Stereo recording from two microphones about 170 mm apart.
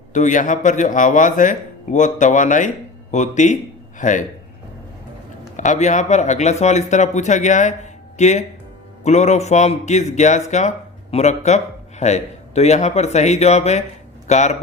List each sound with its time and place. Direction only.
0.1 s a man's voice: 45° left (ahead or behind)
5.5 s speech: 45° left (ahead or behind)